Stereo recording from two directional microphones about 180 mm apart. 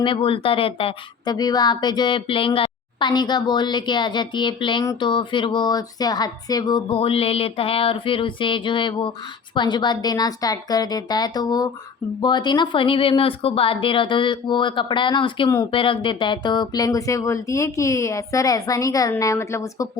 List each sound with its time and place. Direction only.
0.0 s a woman's voice: 30° left (ahead or behind)